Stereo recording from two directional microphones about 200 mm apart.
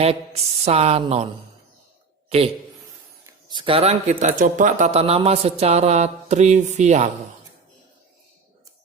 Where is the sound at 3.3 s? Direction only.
25° right (ahead or behind).